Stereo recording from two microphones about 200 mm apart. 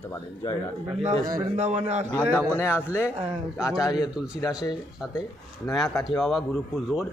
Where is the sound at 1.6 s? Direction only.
35° right (ahead or behind).